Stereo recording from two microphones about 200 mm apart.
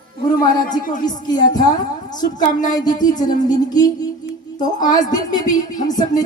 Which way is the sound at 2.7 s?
20° left (ahead or behind).